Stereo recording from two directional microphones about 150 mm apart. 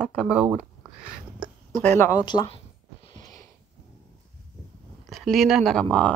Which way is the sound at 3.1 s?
25° left (ahead or behind).